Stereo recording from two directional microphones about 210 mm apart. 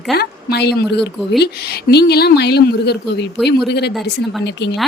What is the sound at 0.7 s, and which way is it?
Speech, centre (ahead or behind).